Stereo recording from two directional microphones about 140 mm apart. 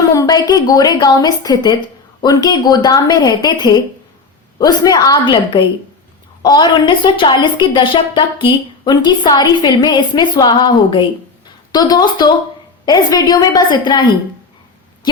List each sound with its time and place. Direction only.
0.1 s a woman's voice: 25° left (ahead or behind)